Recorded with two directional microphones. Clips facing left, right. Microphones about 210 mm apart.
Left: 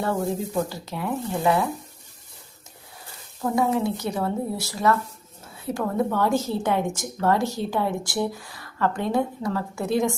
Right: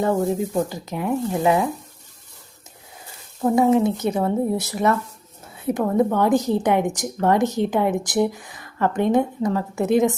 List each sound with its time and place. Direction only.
0.0 s speech: 20° right (ahead or behind)
3.4 s speech: 20° right (ahead or behind)